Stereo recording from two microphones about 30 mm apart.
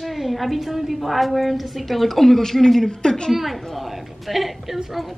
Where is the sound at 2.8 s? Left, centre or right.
Left.